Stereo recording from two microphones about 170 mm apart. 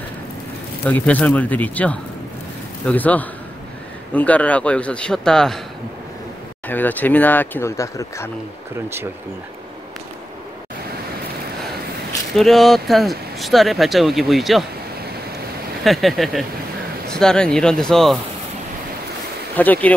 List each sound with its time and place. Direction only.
0.8 s speech: 10° left (ahead or behind)
6.7 s speech: 10° left (ahead or behind)
8.7 s speech: 15° right (ahead or behind)
12.4 s speech: centre (ahead or behind)
15.8 s speech: centre (ahead or behind)
19.5 s speech: 10° left (ahead or behind)